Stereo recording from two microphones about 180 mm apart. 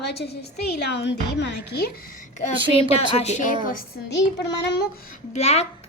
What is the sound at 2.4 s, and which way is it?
A woman's voice, 35° left (ahead or behind).